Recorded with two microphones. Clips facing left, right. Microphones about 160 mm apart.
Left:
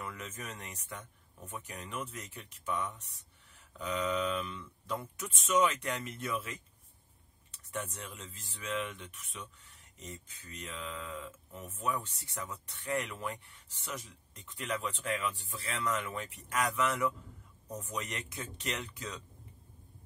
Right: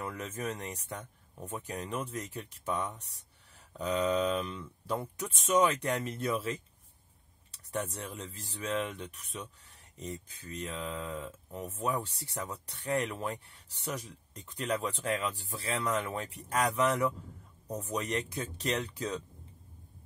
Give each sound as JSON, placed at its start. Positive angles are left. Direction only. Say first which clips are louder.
{"t": 0.0, "sound": "speech", "louder": "right 6 dB", "side_deg": -35}